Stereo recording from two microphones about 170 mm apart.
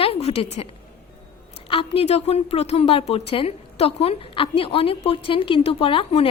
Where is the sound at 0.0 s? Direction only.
35° left (ahead or behind).